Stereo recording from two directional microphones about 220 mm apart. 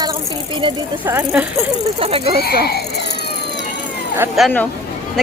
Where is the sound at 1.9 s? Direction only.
25° right (ahead or behind).